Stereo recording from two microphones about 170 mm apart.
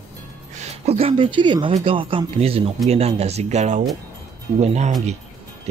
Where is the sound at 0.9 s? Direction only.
35° right (ahead or behind).